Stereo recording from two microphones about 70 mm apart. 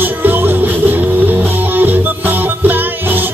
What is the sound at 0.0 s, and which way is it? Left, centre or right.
Music, right.